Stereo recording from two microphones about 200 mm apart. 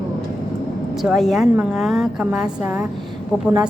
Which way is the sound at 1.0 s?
Centre (ahead or behind).